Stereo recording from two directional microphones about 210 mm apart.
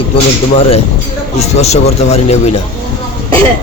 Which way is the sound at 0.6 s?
25° left (ahead or behind).